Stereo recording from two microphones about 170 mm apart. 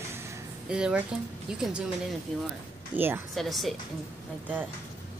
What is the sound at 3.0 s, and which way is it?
Speech, 10° right (ahead or behind).